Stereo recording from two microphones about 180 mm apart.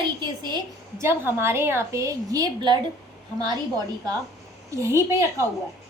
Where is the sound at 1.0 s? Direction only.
15° right (ahead or behind).